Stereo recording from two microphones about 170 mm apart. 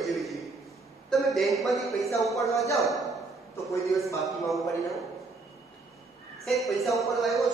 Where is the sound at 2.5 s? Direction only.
20° left (ahead or behind).